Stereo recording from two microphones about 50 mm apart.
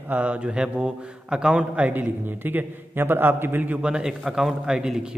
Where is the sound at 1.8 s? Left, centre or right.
Right.